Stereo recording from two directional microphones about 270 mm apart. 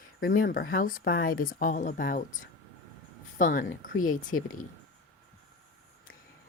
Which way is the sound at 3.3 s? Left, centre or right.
Left.